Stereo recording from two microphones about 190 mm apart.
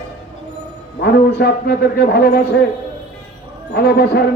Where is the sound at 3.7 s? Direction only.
55° left (ahead or behind).